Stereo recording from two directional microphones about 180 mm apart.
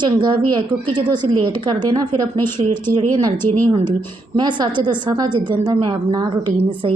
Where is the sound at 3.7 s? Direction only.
25° right (ahead or behind).